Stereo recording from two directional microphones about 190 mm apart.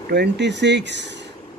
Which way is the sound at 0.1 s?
60° right (ahead or behind).